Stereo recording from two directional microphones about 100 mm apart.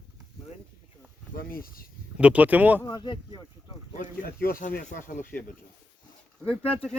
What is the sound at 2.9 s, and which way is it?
Speech, 50° left (ahead or behind).